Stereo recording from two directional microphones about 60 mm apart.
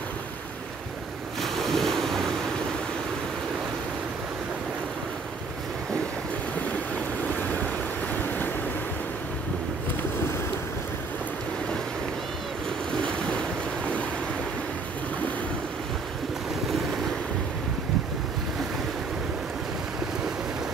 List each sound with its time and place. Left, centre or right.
1.4 s ocean: centre
13.0 s waves: centre